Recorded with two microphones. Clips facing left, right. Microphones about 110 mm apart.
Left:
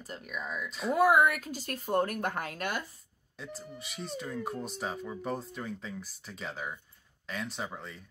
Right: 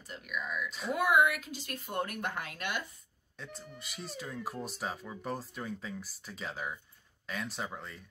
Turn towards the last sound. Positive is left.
turn(degrees=0)  # may be behind; listen again after turning